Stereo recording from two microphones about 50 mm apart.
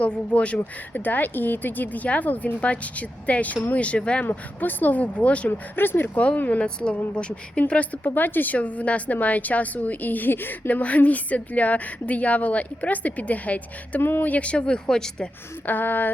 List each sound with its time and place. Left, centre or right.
0.0 s speech: left
1.0 s speech: left
4.3 s speech: left
5.5 s speech: left
6.1 s speech: left
8.0 s speech: left
10.8 s speech: left
14.0 s speech: left
14.3 s speech: left
15.6 s speech: left